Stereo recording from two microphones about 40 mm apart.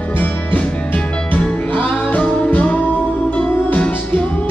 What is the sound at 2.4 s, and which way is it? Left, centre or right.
Music, left.